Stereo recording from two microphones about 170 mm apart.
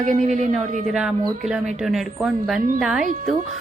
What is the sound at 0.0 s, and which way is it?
Speech, 50° right (ahead or behind).